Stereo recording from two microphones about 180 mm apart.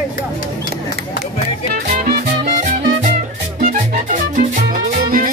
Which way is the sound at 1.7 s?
45° right (ahead or behind).